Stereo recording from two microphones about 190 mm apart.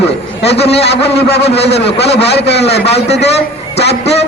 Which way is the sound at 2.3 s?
60° left (ahead or behind).